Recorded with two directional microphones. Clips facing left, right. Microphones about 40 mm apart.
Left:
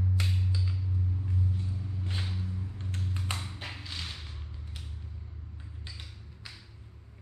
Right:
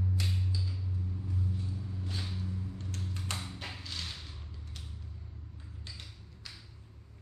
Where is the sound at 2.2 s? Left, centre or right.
Left.